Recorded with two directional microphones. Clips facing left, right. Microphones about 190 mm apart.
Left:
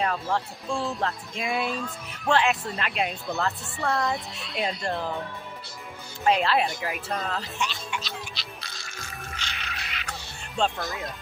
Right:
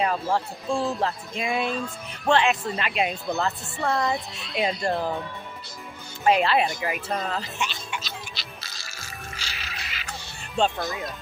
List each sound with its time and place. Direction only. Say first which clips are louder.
0.0 s a woman's voice: right 3 dB; 10° right (ahead or behind)
6.2 s a woman's voice: right 2 dB; 5° right (ahead or behind)
7.2 s music: right 1 dB; 5° right (ahead or behind)
10.6 s a woman's voice: right 3 dB; centre (ahead or behind)